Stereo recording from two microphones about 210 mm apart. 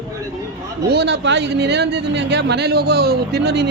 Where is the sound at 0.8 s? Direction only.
50° right (ahead or behind).